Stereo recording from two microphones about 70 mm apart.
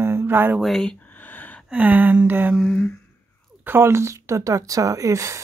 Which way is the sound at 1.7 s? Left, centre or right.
Right.